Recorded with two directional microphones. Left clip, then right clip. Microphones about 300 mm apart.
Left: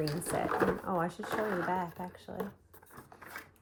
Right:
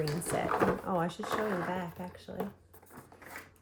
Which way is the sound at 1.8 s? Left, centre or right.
Centre.